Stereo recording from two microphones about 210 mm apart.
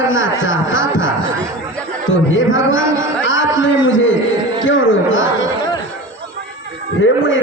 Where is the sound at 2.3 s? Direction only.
65° left (ahead or behind).